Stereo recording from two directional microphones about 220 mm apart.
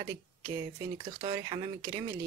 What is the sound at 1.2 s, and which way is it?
Speech, 25° right (ahead or behind).